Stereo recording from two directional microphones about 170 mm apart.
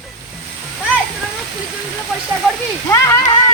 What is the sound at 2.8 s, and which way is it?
Speech, 15° left (ahead or behind).